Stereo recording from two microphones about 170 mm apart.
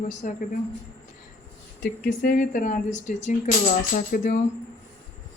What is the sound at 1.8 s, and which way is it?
Speech, 50° left (ahead or behind).